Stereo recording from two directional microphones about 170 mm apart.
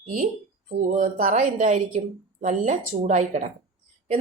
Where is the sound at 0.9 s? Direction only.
50° right (ahead or behind).